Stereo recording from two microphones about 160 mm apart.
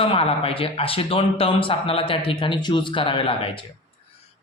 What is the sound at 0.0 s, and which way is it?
Speech, 35° left (ahead or behind).